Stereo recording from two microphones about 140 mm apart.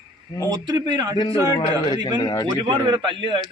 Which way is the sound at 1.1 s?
35° left (ahead or behind).